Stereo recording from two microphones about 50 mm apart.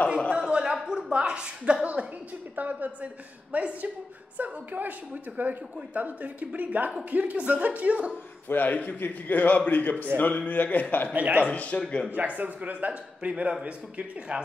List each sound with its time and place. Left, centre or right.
0.5 s a sound: centre
0.7 s a woman's voice: centre; by 8.1 s right
8.5 s a man's voice: left
11.1 s speech: right
11.4 s a man's voice: left
12.1 s a man's voice: right